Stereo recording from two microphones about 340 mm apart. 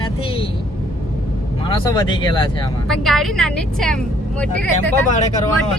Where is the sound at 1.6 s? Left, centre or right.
Centre.